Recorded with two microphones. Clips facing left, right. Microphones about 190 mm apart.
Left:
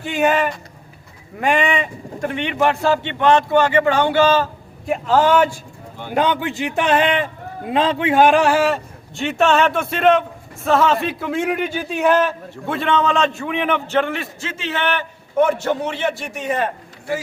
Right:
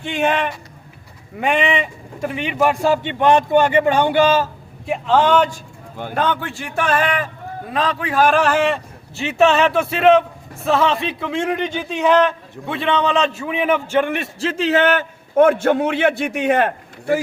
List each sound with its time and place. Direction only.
0.0 s a man's voice: 5° left (ahead or behind); by 4.4 s 15° right (ahead or behind)
4.9 s a man's voice: 5° left (ahead or behind); by 14.3 s 15° right (ahead or behind)
14.3 s a man's voice: 35° right (ahead or behind); by 17.2 s 65° right (ahead or behind)